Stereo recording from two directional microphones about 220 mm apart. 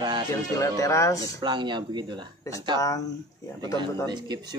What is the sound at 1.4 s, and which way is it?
Speech, 20° right (ahead or behind).